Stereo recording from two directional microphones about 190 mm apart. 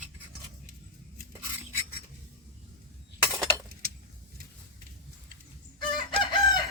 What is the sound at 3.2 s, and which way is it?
Breaking, 5° right (ahead or behind).